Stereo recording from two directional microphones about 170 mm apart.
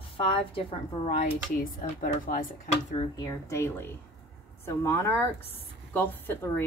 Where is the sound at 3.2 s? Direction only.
15° left (ahead or behind).